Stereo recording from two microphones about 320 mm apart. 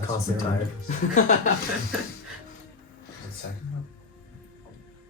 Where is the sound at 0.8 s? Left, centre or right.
Left.